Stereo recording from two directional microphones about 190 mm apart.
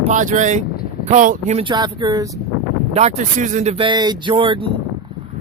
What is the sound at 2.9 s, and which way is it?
Speech, 35° right (ahead or behind).